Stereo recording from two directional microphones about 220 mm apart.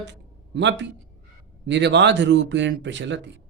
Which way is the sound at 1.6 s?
50° right (ahead or behind).